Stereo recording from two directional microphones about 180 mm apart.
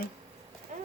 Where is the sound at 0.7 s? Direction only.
45° right (ahead or behind).